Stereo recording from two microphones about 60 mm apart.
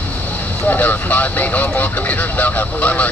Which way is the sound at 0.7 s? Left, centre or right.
Left.